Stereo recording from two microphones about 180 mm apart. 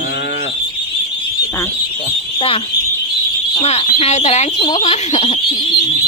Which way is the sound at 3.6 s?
35° left (ahead or behind).